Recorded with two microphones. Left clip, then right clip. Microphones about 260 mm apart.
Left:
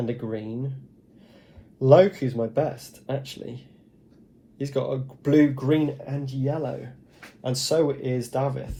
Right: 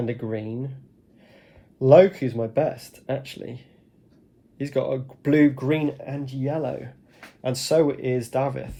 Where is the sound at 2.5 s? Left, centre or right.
Right.